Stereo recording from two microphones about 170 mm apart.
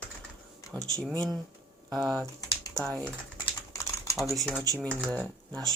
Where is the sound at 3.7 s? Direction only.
20° left (ahead or behind).